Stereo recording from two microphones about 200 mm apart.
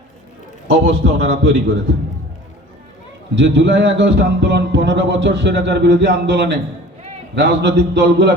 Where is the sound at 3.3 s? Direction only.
65° right (ahead or behind).